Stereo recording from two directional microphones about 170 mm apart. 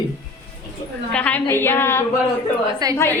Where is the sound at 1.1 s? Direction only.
10° left (ahead or behind).